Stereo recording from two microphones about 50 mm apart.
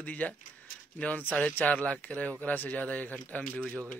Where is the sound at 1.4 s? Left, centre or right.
Left.